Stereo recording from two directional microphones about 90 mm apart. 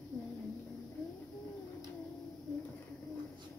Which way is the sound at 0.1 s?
5° left (ahead or behind).